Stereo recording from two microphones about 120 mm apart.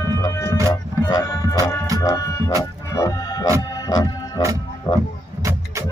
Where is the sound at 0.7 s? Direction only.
35° left (ahead or behind).